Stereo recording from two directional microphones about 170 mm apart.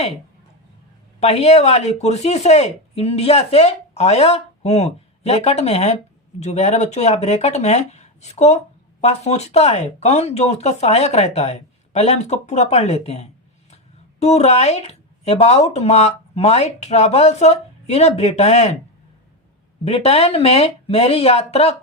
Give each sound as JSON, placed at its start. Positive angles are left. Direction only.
{"t": 1.2, "sound": "speech", "side_deg": 40}
{"t": 19.8, "sound": "speech", "side_deg": 35}